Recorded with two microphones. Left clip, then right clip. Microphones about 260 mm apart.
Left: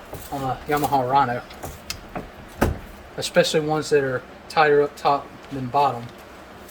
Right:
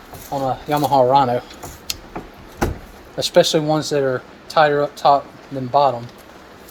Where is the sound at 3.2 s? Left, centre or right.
Right.